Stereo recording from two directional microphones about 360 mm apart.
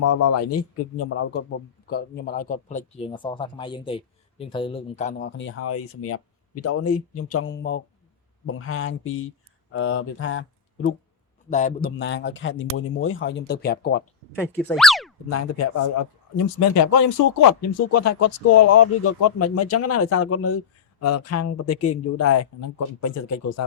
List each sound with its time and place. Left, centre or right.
0.0 s a man's voice: left
11.4 s a man's voice: left
14.3 s speech: centre
16.6 s speech: left